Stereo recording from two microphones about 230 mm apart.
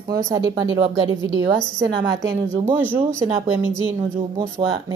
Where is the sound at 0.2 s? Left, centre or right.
Centre.